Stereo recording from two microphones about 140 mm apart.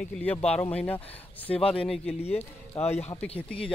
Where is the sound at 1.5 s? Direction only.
40° left (ahead or behind).